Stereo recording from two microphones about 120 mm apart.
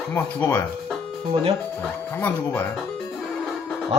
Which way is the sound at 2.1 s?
15° left (ahead or behind).